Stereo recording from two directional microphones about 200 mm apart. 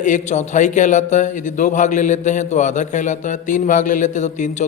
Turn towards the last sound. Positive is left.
turn(degrees=35)  # may be behind; listen again after turning